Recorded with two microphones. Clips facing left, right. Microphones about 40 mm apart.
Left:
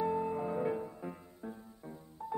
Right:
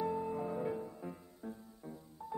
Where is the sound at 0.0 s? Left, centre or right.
Centre.